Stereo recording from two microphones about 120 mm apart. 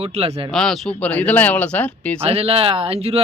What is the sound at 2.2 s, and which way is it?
Speech, 55° right (ahead or behind).